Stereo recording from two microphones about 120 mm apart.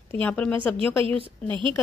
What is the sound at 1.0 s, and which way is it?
Speech, 50° right (ahead or behind).